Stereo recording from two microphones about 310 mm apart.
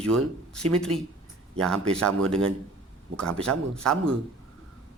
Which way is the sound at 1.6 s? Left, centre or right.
Centre.